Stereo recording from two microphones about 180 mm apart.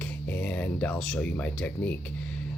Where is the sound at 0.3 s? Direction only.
10° left (ahead or behind).